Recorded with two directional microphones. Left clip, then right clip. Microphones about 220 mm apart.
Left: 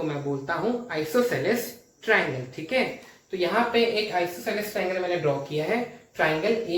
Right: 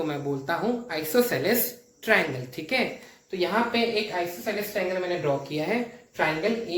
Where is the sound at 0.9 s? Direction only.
45° right (ahead or behind).